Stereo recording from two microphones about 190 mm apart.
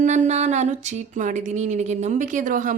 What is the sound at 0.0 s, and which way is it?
A woman's voice, 40° right (ahead or behind).